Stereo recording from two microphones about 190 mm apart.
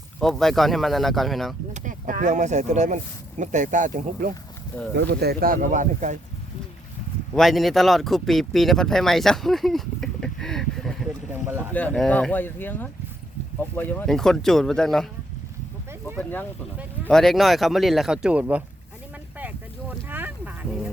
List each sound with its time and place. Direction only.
0.2 s speech: centre (ahead or behind)
1.7 s speech: 40° right (ahead or behind)
4.7 s speech: 10° left (ahead or behind)
5.2 s speech: 55° right (ahead or behind)
7.3 s speech: centre (ahead or behind)
16.1 s speech: 10° left (ahead or behind); by 18.6 s 5° right (ahead or behind)
19.4 s boat: 10° right (ahead or behind)